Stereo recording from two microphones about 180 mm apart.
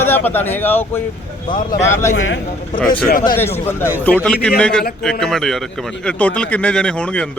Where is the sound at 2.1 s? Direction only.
90° left.